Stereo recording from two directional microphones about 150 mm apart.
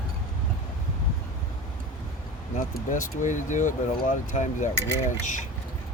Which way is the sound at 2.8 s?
60° left (ahead or behind).